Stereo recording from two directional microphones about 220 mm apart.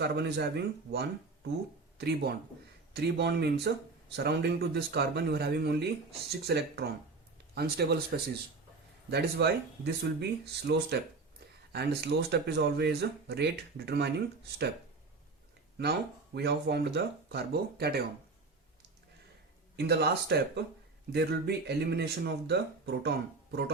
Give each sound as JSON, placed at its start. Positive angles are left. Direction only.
{"t": 0.0, "sound": "speech", "side_deg": -50}
{"t": 15.8, "sound": "speech", "side_deg": -45}
{"t": 19.7, "sound": "speech", "side_deg": -45}